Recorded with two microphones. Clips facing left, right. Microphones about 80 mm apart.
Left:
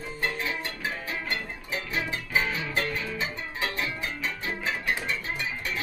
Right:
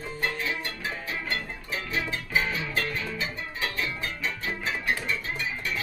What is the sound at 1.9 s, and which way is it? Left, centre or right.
Music, left.